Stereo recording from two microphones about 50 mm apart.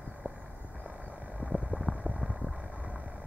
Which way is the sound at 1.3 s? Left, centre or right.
Right.